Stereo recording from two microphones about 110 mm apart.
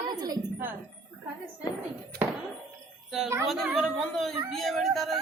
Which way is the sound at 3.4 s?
Centre (ahead or behind).